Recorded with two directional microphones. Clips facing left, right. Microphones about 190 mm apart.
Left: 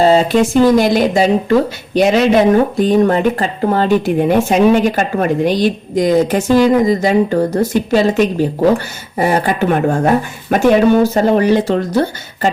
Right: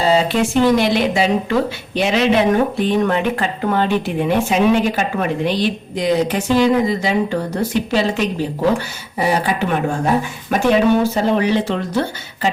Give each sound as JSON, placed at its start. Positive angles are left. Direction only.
{"t": 0.0, "sound": "speech", "side_deg": 45}